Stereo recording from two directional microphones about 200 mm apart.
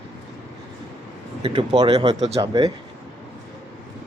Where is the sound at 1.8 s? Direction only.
20° right (ahead or behind).